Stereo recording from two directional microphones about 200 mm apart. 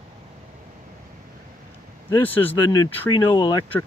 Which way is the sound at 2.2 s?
10° left (ahead or behind).